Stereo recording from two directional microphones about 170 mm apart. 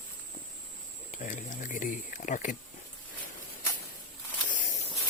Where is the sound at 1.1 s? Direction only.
50° left (ahead or behind).